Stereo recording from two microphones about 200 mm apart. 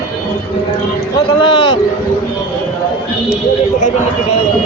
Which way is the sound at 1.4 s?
25° left (ahead or behind).